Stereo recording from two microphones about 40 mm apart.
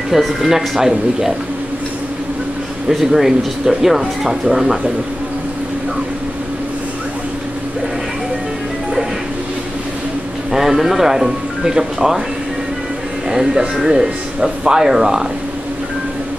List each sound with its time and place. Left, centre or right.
0.1 s speech: centre
2.9 s speech: centre
10.5 s speech: centre
13.3 s speech: centre